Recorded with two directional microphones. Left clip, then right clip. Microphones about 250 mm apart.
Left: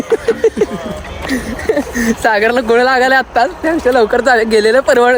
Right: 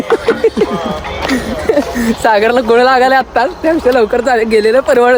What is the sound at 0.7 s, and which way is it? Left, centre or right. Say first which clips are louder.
Music: right 6 dB; right.